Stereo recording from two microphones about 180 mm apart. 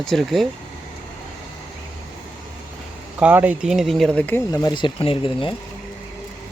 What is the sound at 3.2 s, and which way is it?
Speech, 10° right (ahead or behind).